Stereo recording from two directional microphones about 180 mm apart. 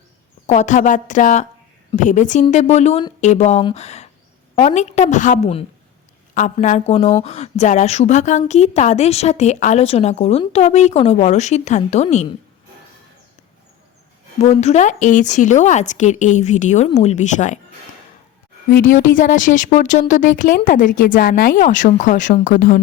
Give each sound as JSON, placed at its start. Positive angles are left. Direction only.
{"t": 0.4, "sound": "a woman's voice", "side_deg": 40}
{"t": 14.3, "sound": "speech", "side_deg": 35}
{"t": 18.7, "sound": "a woman's voice", "side_deg": 50}